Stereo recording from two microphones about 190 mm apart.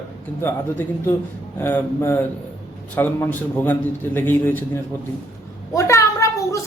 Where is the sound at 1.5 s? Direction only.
10° left (ahead or behind).